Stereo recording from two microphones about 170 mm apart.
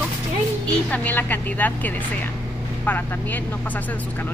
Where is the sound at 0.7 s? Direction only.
10° left (ahead or behind).